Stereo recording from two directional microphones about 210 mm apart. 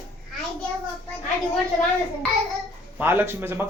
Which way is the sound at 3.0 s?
10° right (ahead or behind).